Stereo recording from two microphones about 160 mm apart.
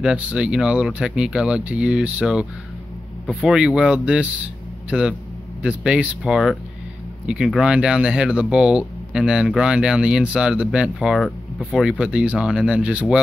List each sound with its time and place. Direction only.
0.0 s speech: 5° right (ahead or behind)
3.3 s speech: 5° left (ahead or behind)
3.5 s a man's voice: 5° right (ahead or behind)